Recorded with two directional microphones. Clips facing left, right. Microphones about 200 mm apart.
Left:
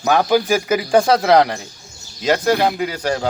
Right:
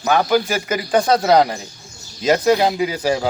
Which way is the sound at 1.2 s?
5° right (ahead or behind).